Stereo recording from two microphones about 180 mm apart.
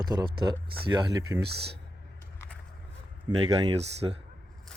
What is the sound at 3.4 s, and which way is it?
Speech, 30° right (ahead or behind).